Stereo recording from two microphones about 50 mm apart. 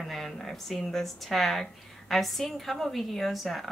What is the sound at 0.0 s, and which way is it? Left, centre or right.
Speech, centre.